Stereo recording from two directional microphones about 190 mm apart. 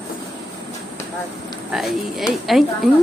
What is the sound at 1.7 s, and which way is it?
A woman's voice, centre (ahead or behind).